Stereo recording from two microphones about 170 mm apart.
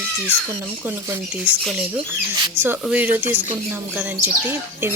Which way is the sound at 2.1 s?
10° right (ahead or behind).